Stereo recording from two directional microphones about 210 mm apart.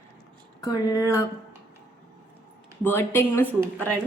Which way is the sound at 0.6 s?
15° left (ahead or behind).